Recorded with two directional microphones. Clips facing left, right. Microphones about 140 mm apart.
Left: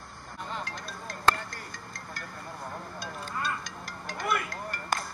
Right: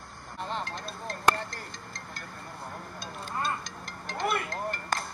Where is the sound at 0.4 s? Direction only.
30° right (ahead or behind).